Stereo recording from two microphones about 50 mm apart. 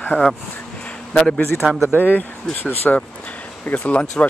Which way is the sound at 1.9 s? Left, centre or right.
Left.